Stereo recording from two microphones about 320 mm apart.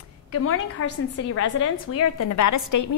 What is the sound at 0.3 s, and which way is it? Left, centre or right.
A woman's voice, left.